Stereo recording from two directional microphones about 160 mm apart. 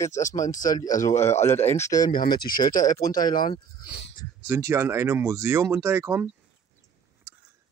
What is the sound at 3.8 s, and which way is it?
Speech, 90° left.